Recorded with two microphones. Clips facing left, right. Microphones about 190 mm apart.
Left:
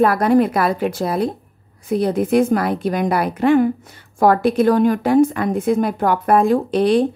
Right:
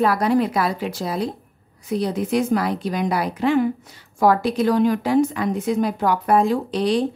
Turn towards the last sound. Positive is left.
turn(degrees=55)  # may be behind; listen again after turning